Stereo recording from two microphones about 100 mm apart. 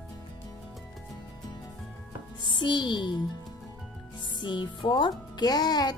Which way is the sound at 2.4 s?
50° left (ahead or behind).